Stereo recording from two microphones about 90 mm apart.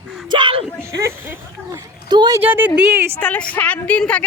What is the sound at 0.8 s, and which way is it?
Speech, 30° right (ahead or behind).